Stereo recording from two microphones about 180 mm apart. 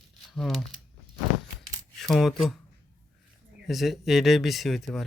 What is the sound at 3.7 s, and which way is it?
Speech, centre (ahead or behind).